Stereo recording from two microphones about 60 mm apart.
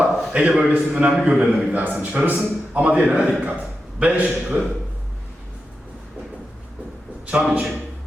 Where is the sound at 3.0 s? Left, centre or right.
Centre.